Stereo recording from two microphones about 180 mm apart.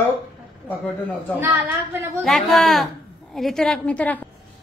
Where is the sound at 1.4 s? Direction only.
10° right (ahead or behind).